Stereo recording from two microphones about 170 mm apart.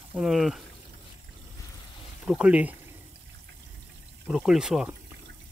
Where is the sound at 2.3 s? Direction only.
5° right (ahead or behind).